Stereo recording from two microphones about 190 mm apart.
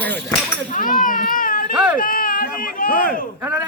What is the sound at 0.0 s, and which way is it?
Speech, 10° left (ahead or behind).